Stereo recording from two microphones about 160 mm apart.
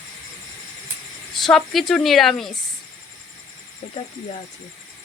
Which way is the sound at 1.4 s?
Centre (ahead or behind).